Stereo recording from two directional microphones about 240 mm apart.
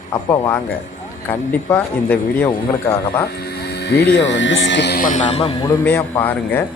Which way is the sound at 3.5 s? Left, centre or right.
Left.